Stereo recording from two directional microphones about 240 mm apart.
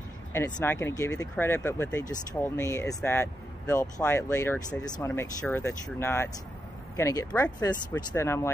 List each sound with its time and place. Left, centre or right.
0.3 s speech: centre